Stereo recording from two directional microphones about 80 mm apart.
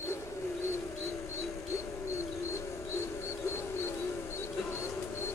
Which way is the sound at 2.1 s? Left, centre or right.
Left.